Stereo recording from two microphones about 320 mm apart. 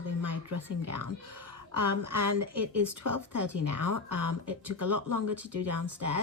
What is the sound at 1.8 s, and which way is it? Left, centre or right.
Speech, right.